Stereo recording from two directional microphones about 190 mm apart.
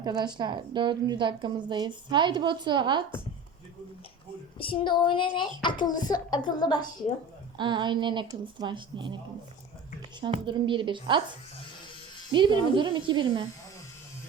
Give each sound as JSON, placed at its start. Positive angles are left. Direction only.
{"t": 0.0, "sound": "a woman's voice", "side_deg": -25}
{"t": 4.5, "sound": "a child's voice", "side_deg": 25}
{"t": 7.6, "sound": "a woman's voice", "side_deg": -25}
{"t": 10.2, "sound": "a woman's voice", "side_deg": -25}
{"t": 12.3, "sound": "a woman's voice", "side_deg": -25}